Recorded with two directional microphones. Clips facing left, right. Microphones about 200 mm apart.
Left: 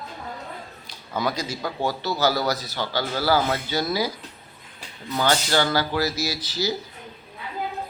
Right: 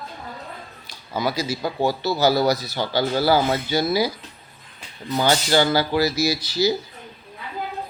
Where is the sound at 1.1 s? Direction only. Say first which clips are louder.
Right 2 dB; 5° right (ahead or behind).